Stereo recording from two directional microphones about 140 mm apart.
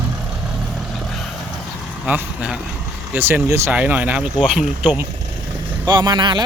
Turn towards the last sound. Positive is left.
turn(degrees=-30)  # may be behind; listen again after turning